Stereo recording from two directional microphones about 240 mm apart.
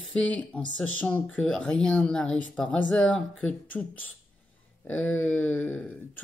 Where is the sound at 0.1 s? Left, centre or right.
Centre.